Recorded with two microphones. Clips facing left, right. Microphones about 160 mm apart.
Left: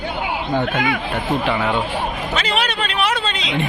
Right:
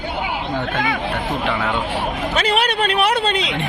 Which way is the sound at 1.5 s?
15° left (ahead or behind).